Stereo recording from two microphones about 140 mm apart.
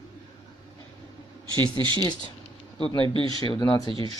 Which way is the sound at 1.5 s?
35° right (ahead or behind).